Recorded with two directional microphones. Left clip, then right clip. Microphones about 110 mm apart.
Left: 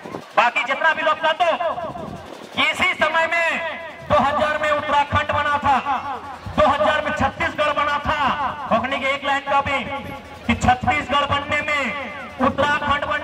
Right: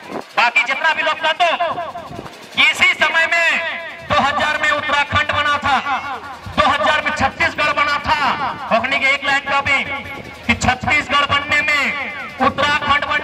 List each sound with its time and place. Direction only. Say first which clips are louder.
0.4 s speech: right 3 dB; 20° right (ahead or behind)
2.5 s a sound: right 6 dB; 20° right (ahead or behind)
10.4 s music: right 1 dB; 20° right (ahead or behind)